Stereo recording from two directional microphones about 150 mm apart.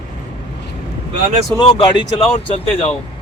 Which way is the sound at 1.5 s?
35° left (ahead or behind).